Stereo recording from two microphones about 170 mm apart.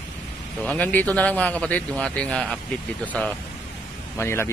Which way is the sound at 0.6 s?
10° left (ahead or behind).